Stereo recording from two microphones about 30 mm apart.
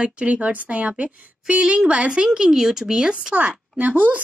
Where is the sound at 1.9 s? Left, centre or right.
Right.